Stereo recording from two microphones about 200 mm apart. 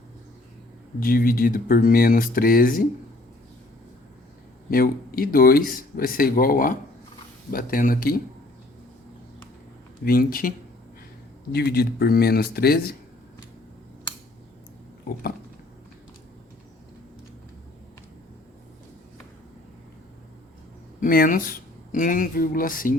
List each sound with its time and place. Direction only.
0.9 s speech: 45° left (ahead or behind)
4.7 s speech: 45° left (ahead or behind)
10.0 s speech: 45° left (ahead or behind)
11.5 s speech: 50° left (ahead or behind)
21.0 s speech: 45° left (ahead or behind)